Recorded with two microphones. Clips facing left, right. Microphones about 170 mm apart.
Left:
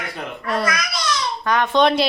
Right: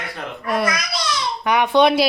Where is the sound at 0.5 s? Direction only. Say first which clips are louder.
Right 1 dB; 15° right (ahead or behind).